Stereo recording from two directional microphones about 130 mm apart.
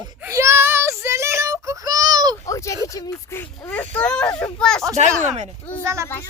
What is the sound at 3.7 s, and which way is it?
Speech, 10° left (ahead or behind).